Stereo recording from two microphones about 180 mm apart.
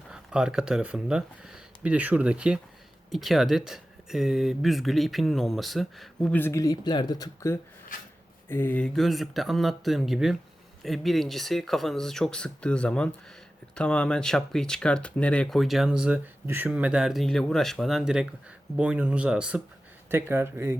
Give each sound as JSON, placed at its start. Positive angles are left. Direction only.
{"t": 0.1, "sound": "speech", "side_deg": -5}
{"t": 7.9, "sound": "speech", "side_deg": 50}
{"t": 8.4, "sound": "speech", "side_deg": 10}